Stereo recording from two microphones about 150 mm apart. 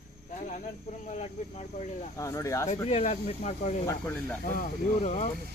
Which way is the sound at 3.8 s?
10° left (ahead or behind).